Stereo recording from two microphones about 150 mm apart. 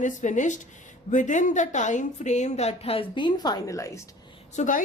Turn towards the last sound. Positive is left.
turn(degrees=55)  # may be behind; listen again after turning